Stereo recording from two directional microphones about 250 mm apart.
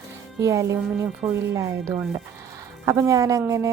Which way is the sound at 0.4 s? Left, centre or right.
Centre.